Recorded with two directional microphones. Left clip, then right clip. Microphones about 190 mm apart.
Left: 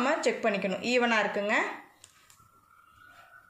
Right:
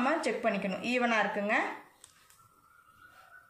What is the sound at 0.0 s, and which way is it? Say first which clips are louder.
A woman's voice: left 3 dB; 35° left (ahead or behind).